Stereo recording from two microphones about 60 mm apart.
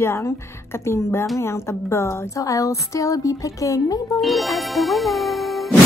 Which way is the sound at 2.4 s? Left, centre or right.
Left.